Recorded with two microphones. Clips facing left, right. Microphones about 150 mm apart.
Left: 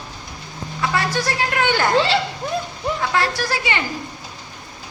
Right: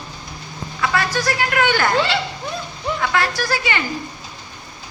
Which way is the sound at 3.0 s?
30° left (ahead or behind).